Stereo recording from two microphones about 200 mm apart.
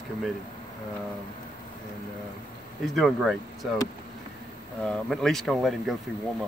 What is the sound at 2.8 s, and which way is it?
Speech, centre (ahead or behind).